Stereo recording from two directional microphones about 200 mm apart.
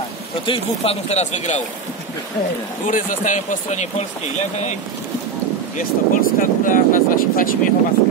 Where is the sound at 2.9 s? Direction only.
40° left (ahead or behind).